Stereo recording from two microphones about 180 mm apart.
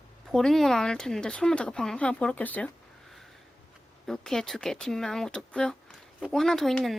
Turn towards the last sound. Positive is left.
turn(degrees=0)  # may be behind; listen again after turning